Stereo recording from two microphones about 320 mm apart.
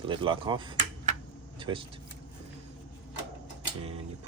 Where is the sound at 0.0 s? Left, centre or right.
Centre.